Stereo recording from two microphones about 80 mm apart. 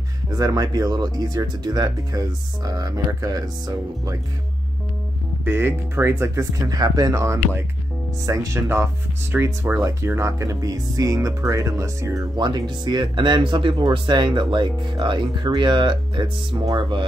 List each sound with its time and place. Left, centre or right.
0.3 s speech: right
5.4 s speech: right
6.7 s speech: right
9.3 s speech: right
10.0 s speech: right
12.4 s speech: right